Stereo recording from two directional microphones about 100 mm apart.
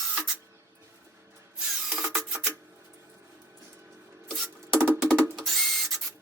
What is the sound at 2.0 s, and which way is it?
Rub, 5° right (ahead or behind).